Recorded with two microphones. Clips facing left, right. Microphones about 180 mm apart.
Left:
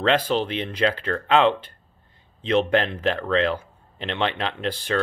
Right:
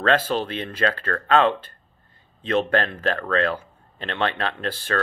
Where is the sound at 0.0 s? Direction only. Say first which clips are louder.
Even; 15° left (ahead or behind).